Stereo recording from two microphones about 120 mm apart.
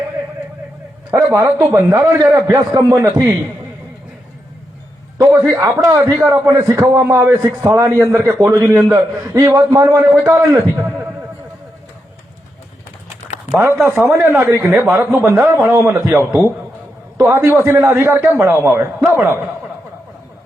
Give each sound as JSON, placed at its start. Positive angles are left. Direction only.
{"t": 1.1, "sound": "a man's voice", "side_deg": -25}
{"t": 5.1, "sound": "a man's voice", "side_deg": -30}
{"t": 13.5, "sound": "a man's voice", "side_deg": -20}